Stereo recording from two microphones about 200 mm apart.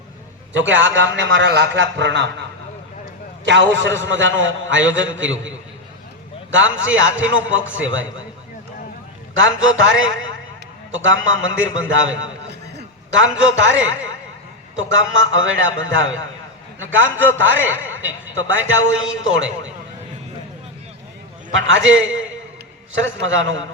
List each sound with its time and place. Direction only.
0.5 s a man's voice: 65° right (ahead or behind)
3.4 s a man's voice: 65° right (ahead or behind)
6.5 s a man's voice: 70° right (ahead or behind)
9.3 s a man's voice: 75° right (ahead or behind)
14.8 s a man's voice: 70° right (ahead or behind)
21.5 s a man's voice: 70° right (ahead or behind)